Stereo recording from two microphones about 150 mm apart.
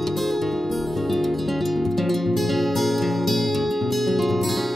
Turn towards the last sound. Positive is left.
turn(degrees=0)  # may be behind; listen again after turning